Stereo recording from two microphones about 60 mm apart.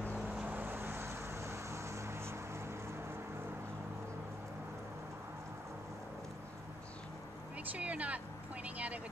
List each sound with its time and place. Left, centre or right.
0.5 s vehicle: right
7.7 s speech: right
8.6 s vehicle: right